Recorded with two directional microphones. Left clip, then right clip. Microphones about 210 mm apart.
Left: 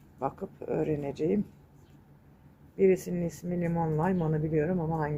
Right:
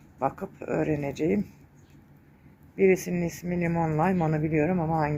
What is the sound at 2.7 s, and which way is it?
Speech, 10° right (ahead or behind).